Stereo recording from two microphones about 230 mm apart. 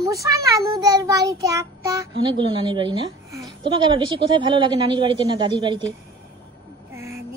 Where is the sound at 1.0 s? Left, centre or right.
Centre.